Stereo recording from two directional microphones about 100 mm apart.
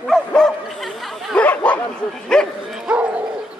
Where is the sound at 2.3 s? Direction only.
5° left (ahead or behind).